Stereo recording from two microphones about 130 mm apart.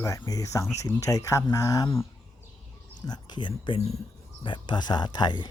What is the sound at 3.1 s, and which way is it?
Speech, 35° left (ahead or behind).